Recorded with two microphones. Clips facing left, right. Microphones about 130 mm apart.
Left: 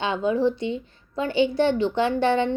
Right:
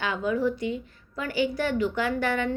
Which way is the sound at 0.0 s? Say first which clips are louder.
Left 4 dB; 25° left (ahead or behind).